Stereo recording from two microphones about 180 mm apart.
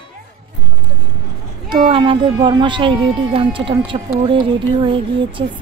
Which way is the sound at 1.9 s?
30° right (ahead or behind).